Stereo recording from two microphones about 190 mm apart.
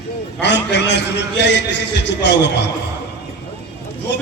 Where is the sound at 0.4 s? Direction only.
65° left (ahead or behind).